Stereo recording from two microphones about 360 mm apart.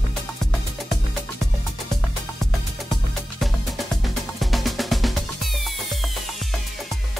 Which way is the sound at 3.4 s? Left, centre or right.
Centre.